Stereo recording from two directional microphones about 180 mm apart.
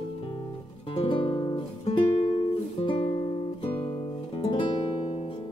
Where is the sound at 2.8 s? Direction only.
30° left (ahead or behind).